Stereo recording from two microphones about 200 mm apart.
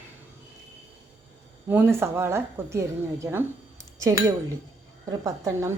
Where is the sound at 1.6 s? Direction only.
10° right (ahead or behind).